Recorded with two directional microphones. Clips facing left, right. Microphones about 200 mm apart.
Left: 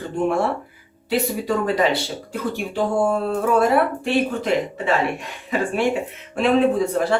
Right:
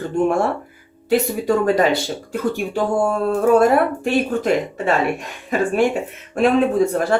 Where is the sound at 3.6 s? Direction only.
45° right (ahead or behind).